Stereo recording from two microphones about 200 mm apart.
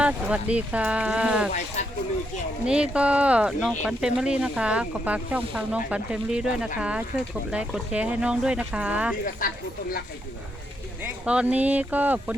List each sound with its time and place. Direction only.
0.0 s speech: 5° right (ahead or behind)
1.5 s speech: 35° left (ahead or behind)
2.6 s speech: 5° right (ahead or behind)
9.4 s speech: 45° left (ahead or behind)
11.0 s speech: 5° right (ahead or behind)